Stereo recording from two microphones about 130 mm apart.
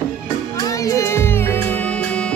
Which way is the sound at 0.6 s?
25° left (ahead or behind).